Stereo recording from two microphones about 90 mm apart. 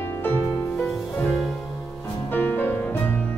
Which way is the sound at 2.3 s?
20° left (ahead or behind).